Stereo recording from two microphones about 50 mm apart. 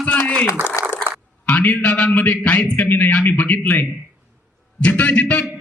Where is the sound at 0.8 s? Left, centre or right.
Left.